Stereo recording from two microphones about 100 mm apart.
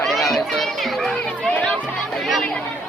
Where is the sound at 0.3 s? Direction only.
Centre (ahead or behind).